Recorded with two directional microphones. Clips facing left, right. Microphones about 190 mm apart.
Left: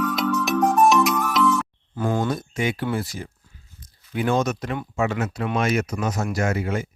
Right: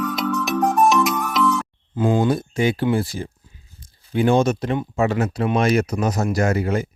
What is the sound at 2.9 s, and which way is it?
Speech, 30° right (ahead or behind).